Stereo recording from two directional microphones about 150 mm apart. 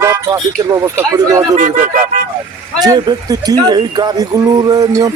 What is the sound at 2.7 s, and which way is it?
Speech, 25° right (ahead or behind).